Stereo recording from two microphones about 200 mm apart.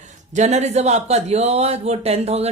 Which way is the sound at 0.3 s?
35° right (ahead or behind).